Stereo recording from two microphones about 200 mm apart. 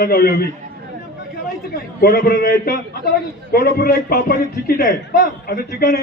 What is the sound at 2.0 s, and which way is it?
A man's voice, 50° left (ahead or behind).